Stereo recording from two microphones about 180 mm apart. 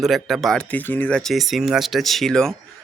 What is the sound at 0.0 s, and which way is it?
Speech, centre (ahead or behind).